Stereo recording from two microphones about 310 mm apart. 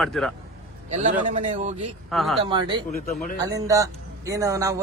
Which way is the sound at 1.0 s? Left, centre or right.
Right.